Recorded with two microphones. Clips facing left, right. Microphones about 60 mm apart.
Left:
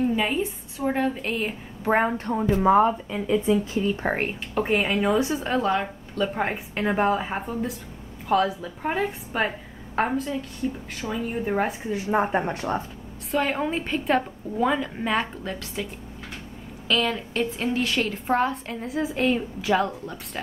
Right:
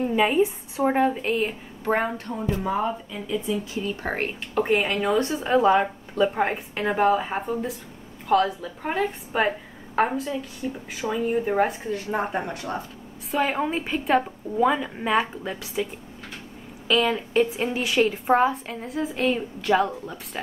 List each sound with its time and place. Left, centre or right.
0.0 s a woman's voice: centre
1.9 s a woman's voice: centre
2.1 s speech: left
3.9 s a woman's voice: centre
5.6 s speech: centre
6.4 s a woman's voice: centre
11.9 s a woman's voice: centre
13.3 s a woman's voice: centre